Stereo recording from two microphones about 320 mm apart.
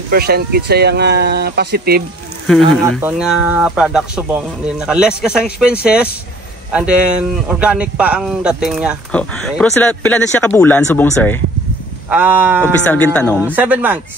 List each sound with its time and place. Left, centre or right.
0.1 s speech: right
2.4 s a man's voice: centre
12.1 s speech: centre
12.8 s a man's voice: centre